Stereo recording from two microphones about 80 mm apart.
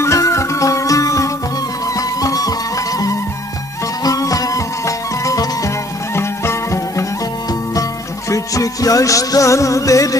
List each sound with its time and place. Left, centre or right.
0.0 s music: left
4.0 s music: left
8.3 s music: left